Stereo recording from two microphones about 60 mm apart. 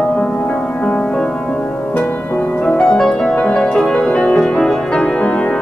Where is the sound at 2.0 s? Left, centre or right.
Left.